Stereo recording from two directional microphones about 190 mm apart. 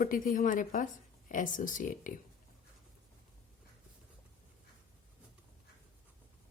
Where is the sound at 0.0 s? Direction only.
45° left (ahead or behind).